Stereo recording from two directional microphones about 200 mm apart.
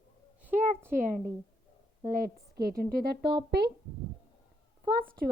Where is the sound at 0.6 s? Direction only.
10° right (ahead or behind).